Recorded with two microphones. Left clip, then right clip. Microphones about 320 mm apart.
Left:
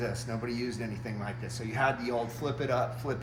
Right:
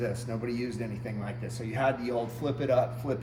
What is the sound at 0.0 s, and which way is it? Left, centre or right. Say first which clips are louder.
Speech: right 2 dB; centre.